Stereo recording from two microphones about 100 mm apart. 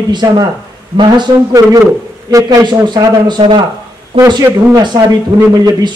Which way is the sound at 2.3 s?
35° right (ahead or behind).